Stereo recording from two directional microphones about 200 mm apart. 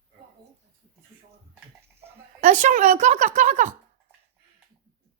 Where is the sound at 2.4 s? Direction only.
35° right (ahead or behind).